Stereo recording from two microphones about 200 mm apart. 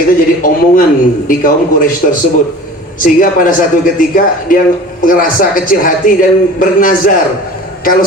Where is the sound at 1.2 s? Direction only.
45° left (ahead or behind).